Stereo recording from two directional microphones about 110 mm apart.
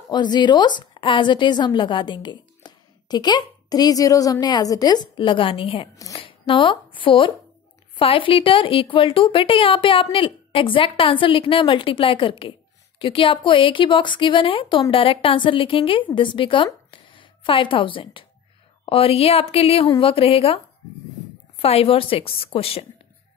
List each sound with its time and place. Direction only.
0.1 s a woman's voice: 40° left (ahead or behind); by 22.8 s 60° left (ahead or behind)